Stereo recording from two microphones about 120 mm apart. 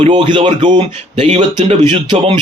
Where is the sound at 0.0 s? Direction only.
40° right (ahead or behind).